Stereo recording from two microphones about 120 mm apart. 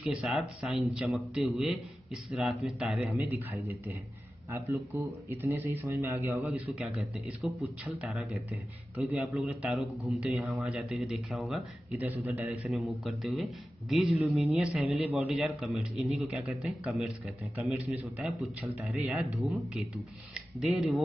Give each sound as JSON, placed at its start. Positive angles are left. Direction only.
{"t": 0.0, "sound": "a man's voice", "side_deg": -5}
{"t": 4.5, "sound": "speech", "side_deg": -20}
{"t": 6.5, "sound": "a man's voice", "side_deg": -10}
{"t": 12.0, "sound": "a man's voice", "side_deg": -15}
{"t": 12.6, "sound": "a man's voice", "side_deg": -5}
{"t": 14.1, "sound": "a man's voice", "side_deg": -15}
{"t": 18.9, "sound": "a man's voice", "side_deg": 0}
{"t": 20.3, "sound": "speech", "side_deg": 0}